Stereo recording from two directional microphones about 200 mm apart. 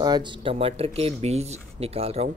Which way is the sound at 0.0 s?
20° right (ahead or behind).